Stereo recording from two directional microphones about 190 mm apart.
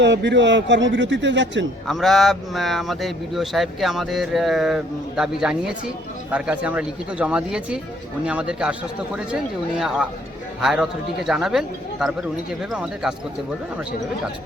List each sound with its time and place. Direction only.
0.0 s a man's voice: 65° right (ahead or behind)
1.9 s speech: centre (ahead or behind)